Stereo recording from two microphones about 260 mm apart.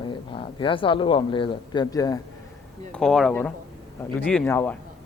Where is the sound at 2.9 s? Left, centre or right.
Centre.